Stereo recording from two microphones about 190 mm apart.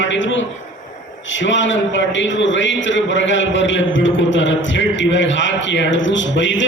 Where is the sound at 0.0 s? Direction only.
75° left (ahead or behind).